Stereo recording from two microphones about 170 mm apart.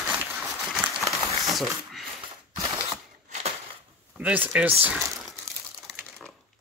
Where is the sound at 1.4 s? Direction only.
Centre (ahead or behind).